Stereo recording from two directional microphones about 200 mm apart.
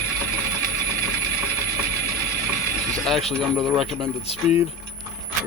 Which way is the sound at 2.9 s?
Centre (ahead or behind).